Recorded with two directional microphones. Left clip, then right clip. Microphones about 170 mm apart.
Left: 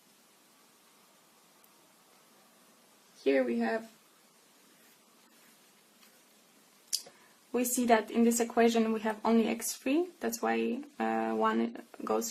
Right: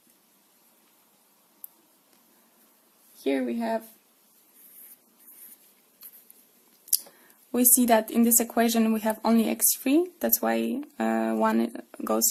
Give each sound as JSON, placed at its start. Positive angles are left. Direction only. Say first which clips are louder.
{"t": 3.2, "sound": "speech", "louder": "right 1 dB", "side_deg": -25}
{"t": 7.5, "sound": "speech", "louder": "right 5 dB", "side_deg": -40}